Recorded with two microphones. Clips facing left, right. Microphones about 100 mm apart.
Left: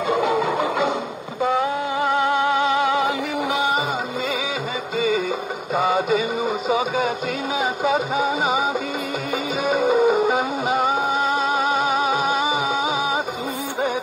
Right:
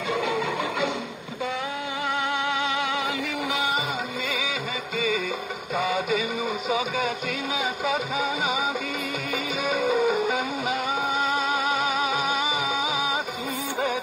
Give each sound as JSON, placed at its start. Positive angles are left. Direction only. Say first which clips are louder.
{"t": 0.2, "sound": "music", "louder": "left 6 dB", "side_deg": 35}
{"t": 4.9, "sound": "music", "louder": "left 6 dB", "side_deg": 30}
{"t": 5.8, "sound": "a sound", "louder": "left 6 dB", "side_deg": 35}
{"t": 9.7, "sound": "music", "louder": "left 6 dB", "side_deg": 35}